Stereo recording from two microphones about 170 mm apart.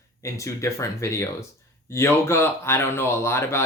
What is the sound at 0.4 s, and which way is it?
Speech, 15° left (ahead or behind).